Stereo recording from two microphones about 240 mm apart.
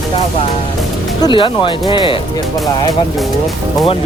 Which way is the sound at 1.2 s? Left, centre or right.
Left.